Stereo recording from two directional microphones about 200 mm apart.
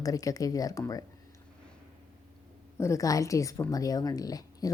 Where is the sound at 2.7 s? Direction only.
15° left (ahead or behind).